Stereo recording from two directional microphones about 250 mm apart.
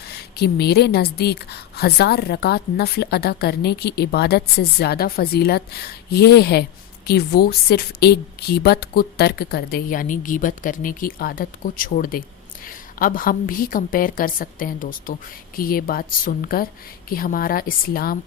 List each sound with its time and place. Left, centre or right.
0.1 s a woman's voice: left